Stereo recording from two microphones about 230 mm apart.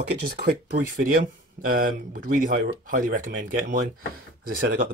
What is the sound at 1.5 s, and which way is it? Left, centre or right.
Speech, right.